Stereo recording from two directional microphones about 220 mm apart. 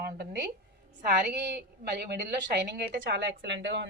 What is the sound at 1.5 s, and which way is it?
A man's voice, 50° right (ahead or behind).